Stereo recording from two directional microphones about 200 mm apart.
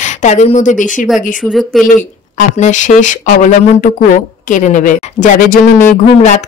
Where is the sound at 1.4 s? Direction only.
Centre (ahead or behind).